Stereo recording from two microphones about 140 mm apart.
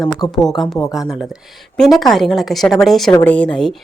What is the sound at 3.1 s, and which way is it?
Speech, 15° left (ahead or behind).